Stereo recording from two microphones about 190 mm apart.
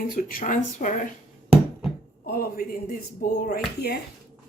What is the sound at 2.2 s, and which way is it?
Speech, 50° left (ahead or behind).